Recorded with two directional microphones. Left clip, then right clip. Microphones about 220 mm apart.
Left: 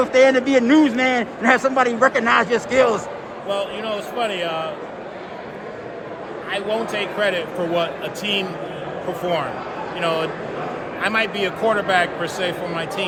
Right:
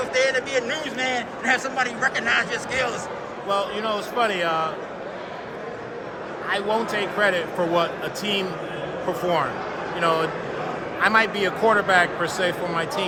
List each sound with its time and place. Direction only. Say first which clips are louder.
0.0 s a man's voice: left 7 dB; 20° left (ahead or behind)
3.5 s a man's voice: even; 10° right (ahead or behind)
6.5 s a man's voice: even; 10° right (ahead or behind)
10.0 s a man's voice: even; 5° right (ahead or behind)